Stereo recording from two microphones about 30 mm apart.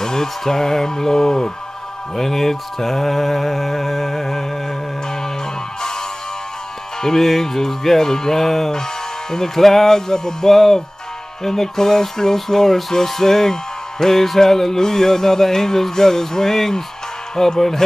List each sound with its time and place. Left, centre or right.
0.0 s speech: centre
2.1 s mantra: centre
5.8 s music: centre
7.0 s speech: centre